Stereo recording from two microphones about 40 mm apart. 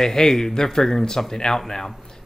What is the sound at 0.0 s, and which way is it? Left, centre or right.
Speech, centre.